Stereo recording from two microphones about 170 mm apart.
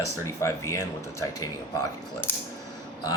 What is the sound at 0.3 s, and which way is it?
Speech, 15° left (ahead or behind).